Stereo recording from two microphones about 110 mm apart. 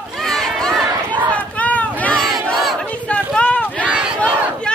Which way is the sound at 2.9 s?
10° left (ahead or behind).